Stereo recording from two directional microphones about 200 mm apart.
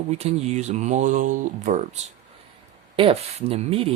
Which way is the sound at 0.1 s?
35° right (ahead or behind).